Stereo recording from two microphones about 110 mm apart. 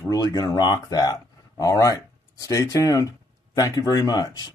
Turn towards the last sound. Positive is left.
turn(degrees=35)  # may be behind; listen again after turning